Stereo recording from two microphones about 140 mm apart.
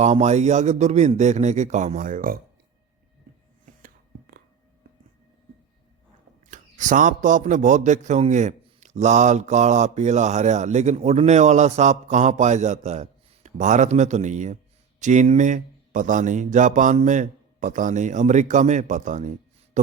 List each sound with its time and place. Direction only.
0.0 s a man's voice: 55° right (ahead or behind); by 2.4 s 85° right
3.7 s whispering: 85° right
6.5 s a man's voice: 65° right (ahead or behind)